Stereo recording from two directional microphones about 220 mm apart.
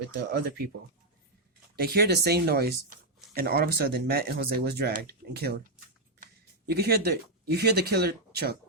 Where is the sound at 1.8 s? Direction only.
45° right (ahead or behind).